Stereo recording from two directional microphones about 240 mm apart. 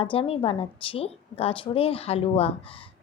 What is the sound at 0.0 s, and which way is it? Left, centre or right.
A woman's voice, left.